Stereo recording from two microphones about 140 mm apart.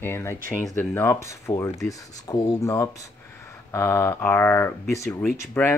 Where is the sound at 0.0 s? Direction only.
15° left (ahead or behind).